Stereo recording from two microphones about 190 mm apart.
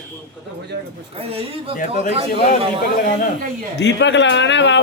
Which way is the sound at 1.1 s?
30° right (ahead or behind).